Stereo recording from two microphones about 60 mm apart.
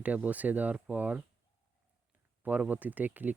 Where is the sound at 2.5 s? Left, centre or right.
Right.